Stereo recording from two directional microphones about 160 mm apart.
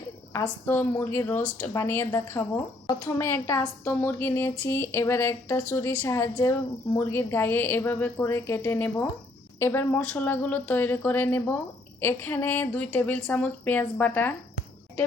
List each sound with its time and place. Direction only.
0.6 s speech: 15° left (ahead or behind)